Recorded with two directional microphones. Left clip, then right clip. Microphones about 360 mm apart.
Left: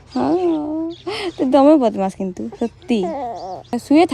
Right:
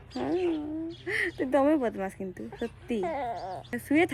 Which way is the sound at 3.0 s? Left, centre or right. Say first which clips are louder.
Left 8 dB; centre.